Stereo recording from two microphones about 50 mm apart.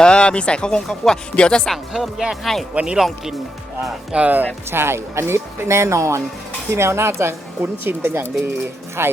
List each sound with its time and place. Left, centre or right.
0.0 s speech: centre
1.6 s speech: centre
2.4 s speech: centre
2.7 s speech: centre
4.1 s speech: right
4.7 s speech: right
6.7 s speech: right
7.6 s speech: right